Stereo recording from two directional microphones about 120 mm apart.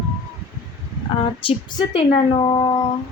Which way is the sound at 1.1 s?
50° left (ahead or behind).